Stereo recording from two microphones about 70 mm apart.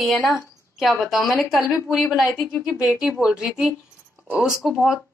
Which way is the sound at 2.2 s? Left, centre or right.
Left.